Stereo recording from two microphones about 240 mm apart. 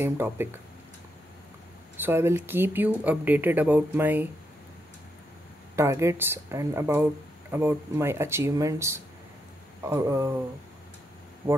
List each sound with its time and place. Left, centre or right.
0.0 s speech: centre
2.0 s speech: centre
5.8 s speech: centre
11.4 s speech: centre